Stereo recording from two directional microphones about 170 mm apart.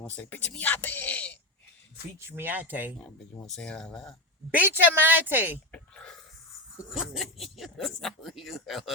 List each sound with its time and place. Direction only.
0.0 s speech: 10° left (ahead or behind)
2.2 s a woman's voice: 10° right (ahead or behind)
3.0 s speech: 5° left (ahead or behind)
4.5 s a woman's voice: 10° right (ahead or behind)
5.7 s speech: 5° left (ahead or behind)